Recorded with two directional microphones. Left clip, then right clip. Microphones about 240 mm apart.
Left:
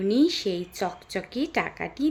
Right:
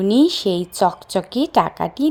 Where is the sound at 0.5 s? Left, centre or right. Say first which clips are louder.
Right 12 dB; right.